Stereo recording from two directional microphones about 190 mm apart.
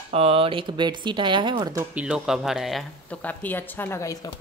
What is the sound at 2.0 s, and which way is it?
Speech, 5° right (ahead or behind).